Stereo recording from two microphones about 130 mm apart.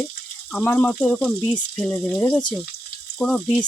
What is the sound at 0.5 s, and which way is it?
Speech, 15° left (ahead or behind).